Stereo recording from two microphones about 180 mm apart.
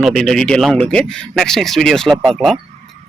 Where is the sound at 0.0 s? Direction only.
Centre (ahead or behind).